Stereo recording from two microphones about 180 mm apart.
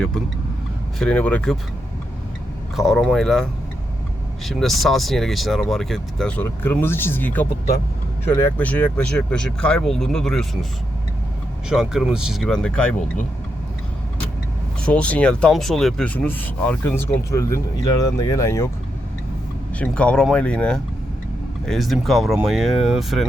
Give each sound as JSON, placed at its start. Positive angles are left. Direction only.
{"t": 0.9, "sound": "speech", "side_deg": 5}
{"t": 2.7, "sound": "speech", "side_deg": 0}
{"t": 4.4, "sound": "speech", "side_deg": 0}
{"t": 11.7, "sound": "speech", "side_deg": -5}
{"t": 14.8, "sound": "speech", "side_deg": 5}
{"t": 19.8, "sound": "speech", "side_deg": 5}